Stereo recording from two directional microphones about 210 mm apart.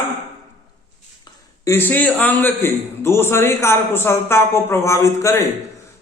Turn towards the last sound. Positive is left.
turn(degrees=15)  # may be behind; listen again after turning